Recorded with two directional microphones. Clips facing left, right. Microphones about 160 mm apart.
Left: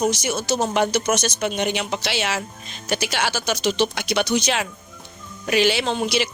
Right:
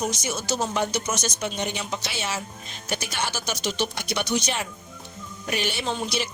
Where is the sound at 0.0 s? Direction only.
85° left.